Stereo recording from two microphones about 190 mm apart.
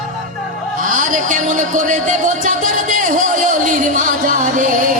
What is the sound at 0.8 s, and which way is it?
Music, 40° right (ahead or behind).